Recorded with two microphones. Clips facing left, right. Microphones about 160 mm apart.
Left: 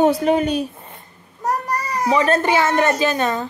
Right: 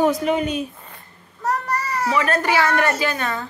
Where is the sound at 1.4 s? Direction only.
15° left (ahead or behind).